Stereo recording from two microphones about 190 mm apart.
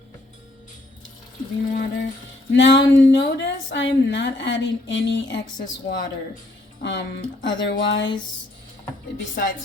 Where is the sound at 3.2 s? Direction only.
65° left (ahead or behind).